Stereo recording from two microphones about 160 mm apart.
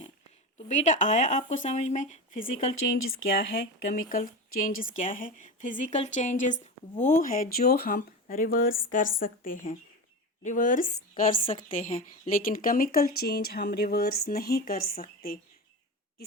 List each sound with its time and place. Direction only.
0.7 s speech: 50° left (ahead or behind)
3.2 s speech: 65° left (ahead or behind)